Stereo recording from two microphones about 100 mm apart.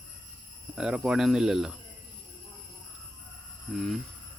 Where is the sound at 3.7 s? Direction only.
Centre (ahead or behind).